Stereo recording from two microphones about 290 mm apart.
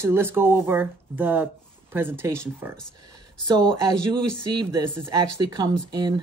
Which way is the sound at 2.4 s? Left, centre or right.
Centre.